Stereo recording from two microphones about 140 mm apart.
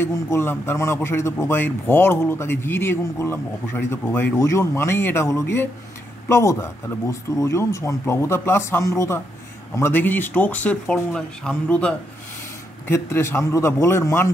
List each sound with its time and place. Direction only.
0.0 s speech: 15° left (ahead or behind)